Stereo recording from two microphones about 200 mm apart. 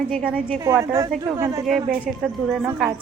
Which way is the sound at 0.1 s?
Centre (ahead or behind).